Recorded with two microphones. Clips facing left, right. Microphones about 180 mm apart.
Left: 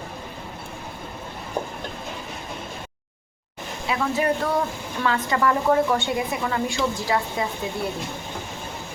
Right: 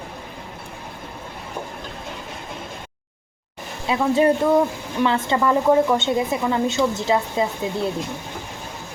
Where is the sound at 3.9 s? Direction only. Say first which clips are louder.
Right 6 dB; 25° right (ahead or behind).